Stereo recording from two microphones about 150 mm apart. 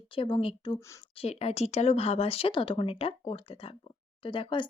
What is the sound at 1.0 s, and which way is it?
Speech, 40° left (ahead or behind).